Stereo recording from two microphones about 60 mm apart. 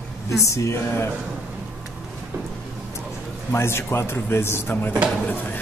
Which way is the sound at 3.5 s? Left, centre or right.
Left.